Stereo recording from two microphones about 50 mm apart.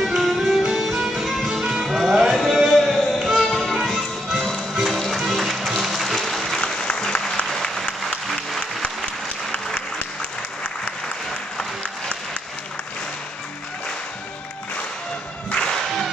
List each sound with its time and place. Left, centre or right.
0.0 s music: centre
6.6 s applause: centre
11.5 s applause: centre
15.5 s music: centre